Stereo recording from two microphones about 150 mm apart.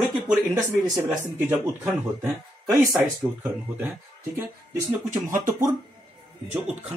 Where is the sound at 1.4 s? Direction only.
15° right (ahead or behind).